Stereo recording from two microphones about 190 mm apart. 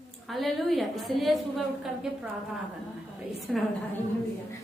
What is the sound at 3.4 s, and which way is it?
Speech, centre (ahead or behind).